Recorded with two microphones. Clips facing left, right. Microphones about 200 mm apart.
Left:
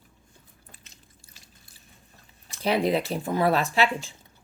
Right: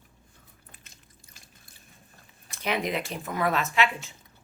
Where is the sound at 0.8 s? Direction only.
50° right (ahead or behind).